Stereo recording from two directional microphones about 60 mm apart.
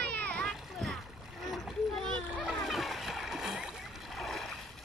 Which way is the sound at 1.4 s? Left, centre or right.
Centre.